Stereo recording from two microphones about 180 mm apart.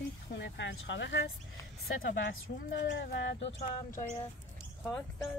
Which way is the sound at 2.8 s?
70° left (ahead or behind).